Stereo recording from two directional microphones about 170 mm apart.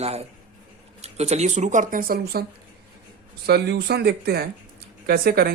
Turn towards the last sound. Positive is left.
turn(degrees=-65)  # may be behind; listen again after turning